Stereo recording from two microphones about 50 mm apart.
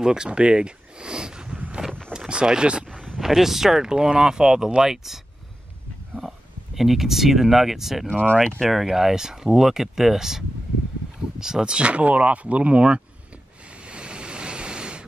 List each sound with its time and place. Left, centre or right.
0.0 s speech: centre
3.2 s speech: centre
8.1 s speech: left
8.5 s speech: centre; by 13.0 s right
13.8 s waves: centre